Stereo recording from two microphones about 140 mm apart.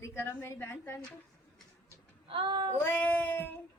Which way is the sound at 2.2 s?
40° right (ahead or behind).